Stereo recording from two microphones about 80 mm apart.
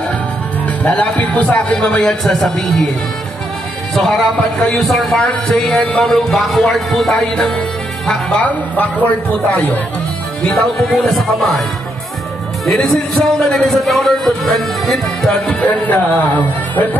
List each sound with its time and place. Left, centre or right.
0.7 s a man's voice: centre
3.9 s a man's voice: centre
10.5 s a man's voice: centre
12.6 s a man's voice: centre
15.8 s speech: left